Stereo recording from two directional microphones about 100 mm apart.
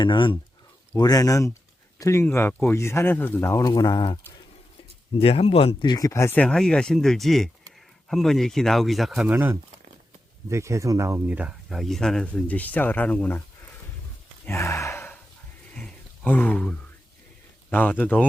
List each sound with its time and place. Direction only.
0.0 s speech: 55° left (ahead or behind)
0.9 s speech: 40° left (ahead or behind)
5.1 s speech: 75° left (ahead or behind)
5.8 s speech: 40° left (ahead or behind)
6.3 s speech: 10° left (ahead or behind)
9.2 s speech: 20° right (ahead or behind)
10.5 s speech: 30° right (ahead or behind)
11.3 s speech: 15° right (ahead or behind)
11.7 s speech: centre (ahead or behind)
14.4 s speech: 25° left (ahead or behind)
15.7 s a sound: 15° left (ahead or behind)
17.7 s speech: 20° left (ahead or behind)